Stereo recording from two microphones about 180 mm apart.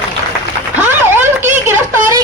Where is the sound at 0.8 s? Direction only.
10° right (ahead or behind).